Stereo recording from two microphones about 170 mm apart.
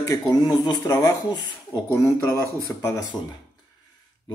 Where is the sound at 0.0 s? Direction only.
20° left (ahead or behind).